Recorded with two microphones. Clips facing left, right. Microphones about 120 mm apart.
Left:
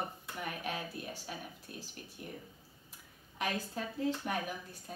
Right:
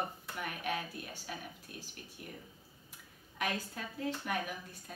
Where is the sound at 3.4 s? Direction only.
35° left (ahead or behind).